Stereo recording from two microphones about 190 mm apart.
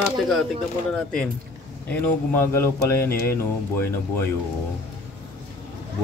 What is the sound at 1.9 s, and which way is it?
Speech, 10° left (ahead or behind).